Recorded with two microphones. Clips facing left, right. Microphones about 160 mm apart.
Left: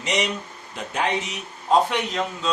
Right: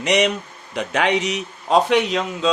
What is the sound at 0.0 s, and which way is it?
A man's voice, 70° right (ahead or behind).